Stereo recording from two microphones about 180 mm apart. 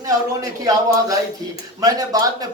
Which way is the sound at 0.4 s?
20° right (ahead or behind).